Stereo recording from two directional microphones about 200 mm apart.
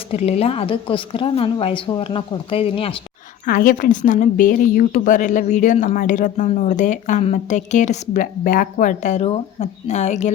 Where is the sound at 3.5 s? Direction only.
45° left (ahead or behind).